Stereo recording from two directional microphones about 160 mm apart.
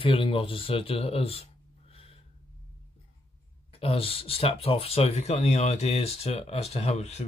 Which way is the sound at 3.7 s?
35° left (ahead or behind).